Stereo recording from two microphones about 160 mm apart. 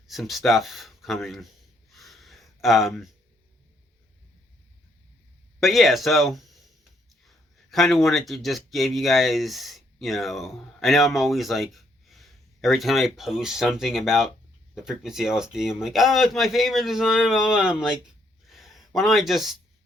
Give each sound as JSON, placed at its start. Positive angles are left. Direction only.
{"t": 0.1, "sound": "speech", "side_deg": 0}
{"t": 1.9, "sound": "a sound", "side_deg": 0}
{"t": 5.5, "sound": "speech", "side_deg": 0}